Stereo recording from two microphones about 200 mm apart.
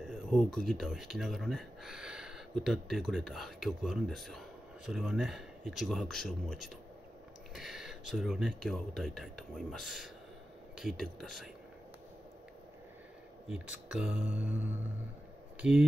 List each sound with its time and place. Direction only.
0.0 s speech: centre (ahead or behind)
13.8 s mantra: 5° right (ahead or behind)
15.6 s speech: centre (ahead or behind)